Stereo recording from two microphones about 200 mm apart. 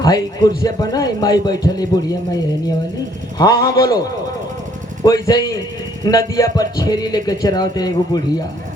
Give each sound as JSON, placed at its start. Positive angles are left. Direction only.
{"t": 0.0, "sound": "a man's voice", "side_deg": 20}